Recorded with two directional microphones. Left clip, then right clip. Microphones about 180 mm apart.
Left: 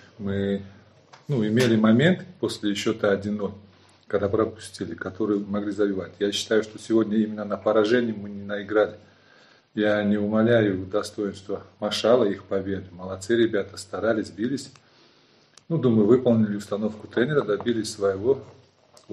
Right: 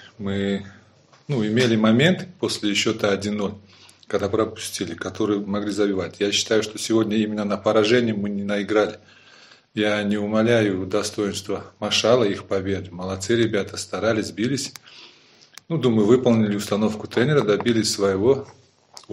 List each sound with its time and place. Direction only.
0.2 s speech: 25° right (ahead or behind)